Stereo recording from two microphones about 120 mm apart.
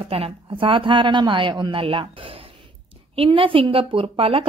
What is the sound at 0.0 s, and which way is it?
A woman's voice, 50° right (ahead or behind).